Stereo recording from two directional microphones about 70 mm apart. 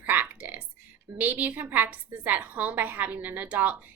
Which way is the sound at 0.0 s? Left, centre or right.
Right.